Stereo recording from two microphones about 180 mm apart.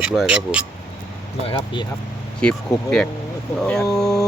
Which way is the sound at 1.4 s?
30° left (ahead or behind).